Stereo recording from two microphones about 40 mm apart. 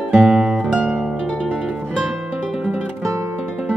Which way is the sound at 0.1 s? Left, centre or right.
Right.